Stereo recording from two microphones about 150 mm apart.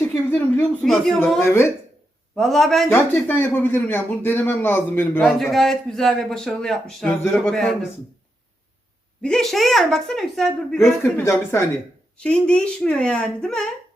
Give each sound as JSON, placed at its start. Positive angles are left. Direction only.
{"t": 0.0, "sound": "speech", "side_deg": 15}
{"t": 1.4, "sound": "speech", "side_deg": 15}
{"t": 2.3, "sound": "a man's voice", "side_deg": 0}
{"t": 2.9, "sound": "speech", "side_deg": 15}
{"t": 5.2, "sound": "a man's voice", "side_deg": 0}
{"t": 9.2, "sound": "a man's voice", "side_deg": 5}
{"t": 11.0, "sound": "speech", "side_deg": 15}
{"t": 12.1, "sound": "speech", "side_deg": 5}